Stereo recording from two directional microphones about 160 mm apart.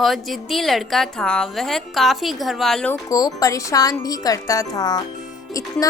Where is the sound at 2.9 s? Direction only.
20° left (ahead or behind).